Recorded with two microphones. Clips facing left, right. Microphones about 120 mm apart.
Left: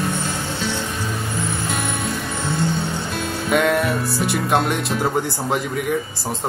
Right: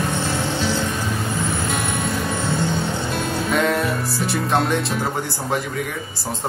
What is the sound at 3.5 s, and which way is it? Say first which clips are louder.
Music: left 3 dB; 5° left (ahead or behind).